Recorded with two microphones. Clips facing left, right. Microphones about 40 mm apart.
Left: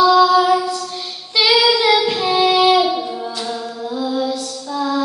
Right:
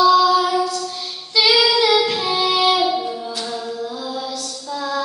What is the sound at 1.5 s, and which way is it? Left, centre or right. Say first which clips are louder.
Child singing: left 2 dB; centre.